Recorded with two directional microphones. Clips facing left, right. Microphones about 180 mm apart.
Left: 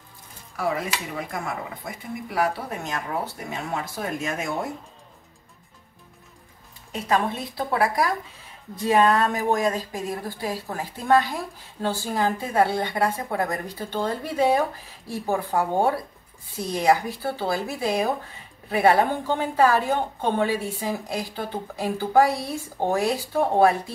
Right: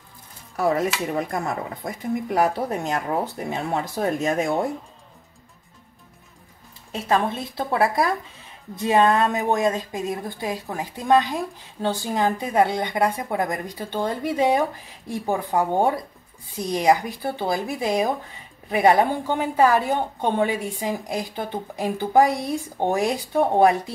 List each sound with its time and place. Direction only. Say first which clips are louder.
0.7 s speech: right 6 dB; 40° right (ahead or behind)
6.9 s a woman's voice: right 2 dB; 30° right (ahead or behind)